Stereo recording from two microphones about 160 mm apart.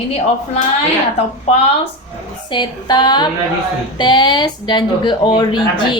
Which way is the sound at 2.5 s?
25° left (ahead or behind).